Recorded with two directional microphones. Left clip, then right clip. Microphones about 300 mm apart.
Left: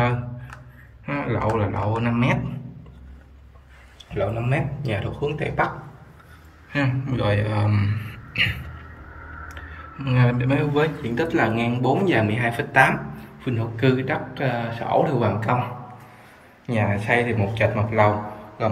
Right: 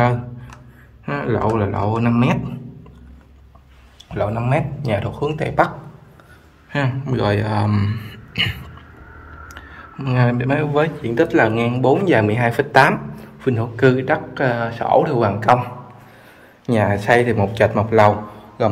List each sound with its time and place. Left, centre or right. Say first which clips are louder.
1.0 s speech: right 4 dB; centre
4.1 s speech: right 5 dB; centre
6.7 s speech: right 3 dB; centre
9.9 s speech: right 4 dB; centre
16.7 s speech: right 6 dB; centre